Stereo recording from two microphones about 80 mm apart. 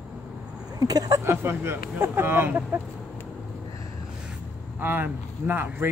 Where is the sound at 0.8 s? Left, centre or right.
Right.